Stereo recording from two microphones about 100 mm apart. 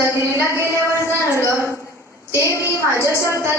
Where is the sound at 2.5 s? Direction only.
25° right (ahead or behind).